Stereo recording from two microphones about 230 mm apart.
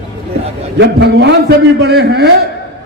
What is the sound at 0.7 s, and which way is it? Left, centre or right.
A man's voice, right.